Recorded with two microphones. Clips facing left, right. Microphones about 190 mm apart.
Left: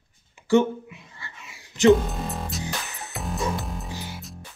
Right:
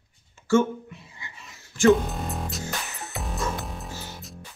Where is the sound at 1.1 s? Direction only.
15° right (ahead or behind).